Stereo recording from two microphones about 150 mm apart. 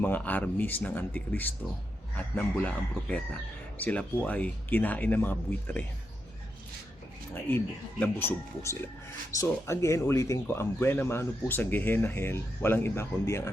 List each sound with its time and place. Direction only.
0.0 s speech: 10° left (ahead or behind)
7.5 s speech: 10° left (ahead or behind)